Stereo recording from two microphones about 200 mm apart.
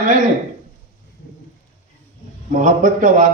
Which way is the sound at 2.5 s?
40° right (ahead or behind).